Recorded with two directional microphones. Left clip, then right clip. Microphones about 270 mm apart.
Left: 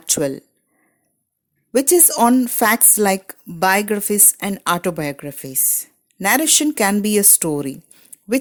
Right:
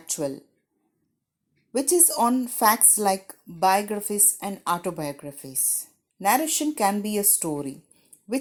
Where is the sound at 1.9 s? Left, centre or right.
Left.